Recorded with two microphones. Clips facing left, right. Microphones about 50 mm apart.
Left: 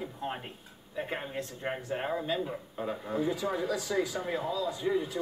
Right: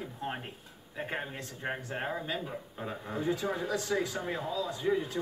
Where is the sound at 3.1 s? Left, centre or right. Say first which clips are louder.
Left 1 dB; right.